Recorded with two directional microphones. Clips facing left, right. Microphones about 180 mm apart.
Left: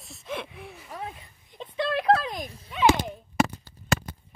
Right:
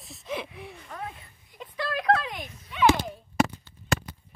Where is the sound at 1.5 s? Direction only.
25° left (ahead or behind).